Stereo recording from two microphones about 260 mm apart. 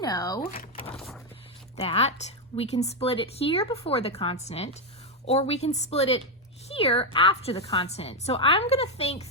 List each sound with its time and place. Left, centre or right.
0.0 s speech: centre
1.7 s a woman's voice: left